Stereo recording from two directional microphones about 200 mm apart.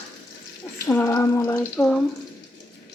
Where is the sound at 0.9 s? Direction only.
15° left (ahead or behind).